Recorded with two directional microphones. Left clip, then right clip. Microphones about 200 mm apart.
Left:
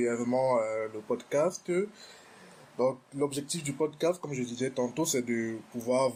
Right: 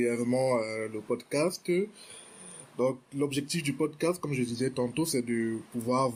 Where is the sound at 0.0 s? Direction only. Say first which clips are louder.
Even; 30° right (ahead or behind).